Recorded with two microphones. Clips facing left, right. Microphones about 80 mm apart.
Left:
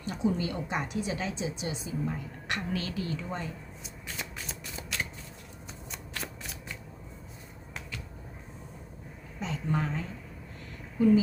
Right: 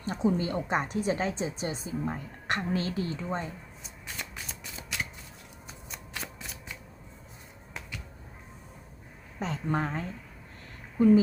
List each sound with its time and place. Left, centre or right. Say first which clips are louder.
0.0 s a woman's voice: right 2 dB; right
3.8 s shuffling cards: left 1 dB; centre
9.4 s a woman's voice: right 2 dB; right
11.0 s speech: right 2 dB; right